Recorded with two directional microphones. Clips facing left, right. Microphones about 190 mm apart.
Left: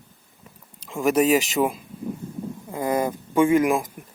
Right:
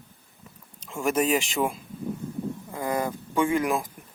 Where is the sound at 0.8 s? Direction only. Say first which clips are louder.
Left 5 dB; centre (ahead or behind).